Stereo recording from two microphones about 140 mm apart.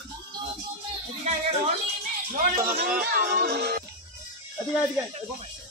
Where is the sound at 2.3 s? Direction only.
85° right.